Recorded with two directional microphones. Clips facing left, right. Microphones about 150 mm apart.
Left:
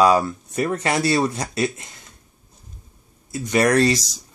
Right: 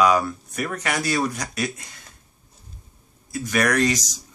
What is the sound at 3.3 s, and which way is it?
Speech, 25° left (ahead or behind).